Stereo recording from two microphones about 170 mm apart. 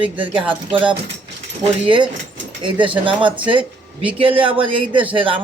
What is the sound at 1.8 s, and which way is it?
Speech, 30° right (ahead or behind).